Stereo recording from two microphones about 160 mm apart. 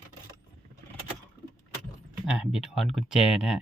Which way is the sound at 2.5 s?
Centre (ahead or behind).